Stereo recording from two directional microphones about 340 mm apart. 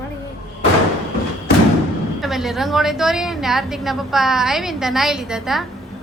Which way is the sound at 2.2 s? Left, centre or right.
Centre.